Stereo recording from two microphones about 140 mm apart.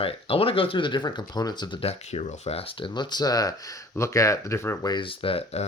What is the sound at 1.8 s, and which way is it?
Speech, 45° left (ahead or behind).